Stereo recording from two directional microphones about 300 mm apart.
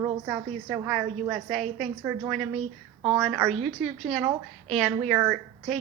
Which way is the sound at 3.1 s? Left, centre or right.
Centre.